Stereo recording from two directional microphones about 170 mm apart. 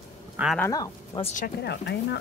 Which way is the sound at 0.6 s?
20° left (ahead or behind).